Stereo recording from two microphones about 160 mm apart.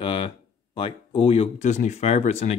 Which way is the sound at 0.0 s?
30° left (ahead or behind).